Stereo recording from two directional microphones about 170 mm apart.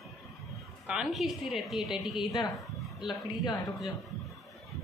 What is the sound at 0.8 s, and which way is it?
A woman's voice, 5° right (ahead or behind).